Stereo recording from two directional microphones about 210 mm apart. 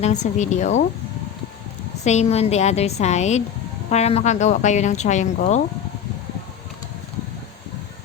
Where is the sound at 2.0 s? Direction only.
30° left (ahead or behind).